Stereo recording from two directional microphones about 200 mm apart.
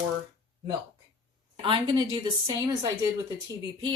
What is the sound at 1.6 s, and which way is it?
Speech, 25° right (ahead or behind).